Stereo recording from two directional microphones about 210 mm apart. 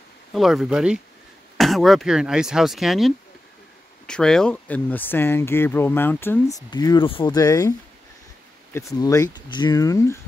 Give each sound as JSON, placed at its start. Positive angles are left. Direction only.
{"t": 0.3, "sound": "speech", "side_deg": 0}
{"t": 8.7, "sound": "speech", "side_deg": 15}